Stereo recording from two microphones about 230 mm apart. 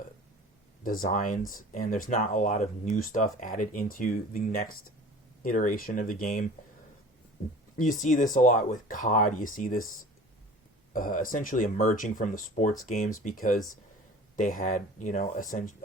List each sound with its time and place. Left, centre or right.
0.9 s speech: left
7.8 s speech: left
10.9 s speech: left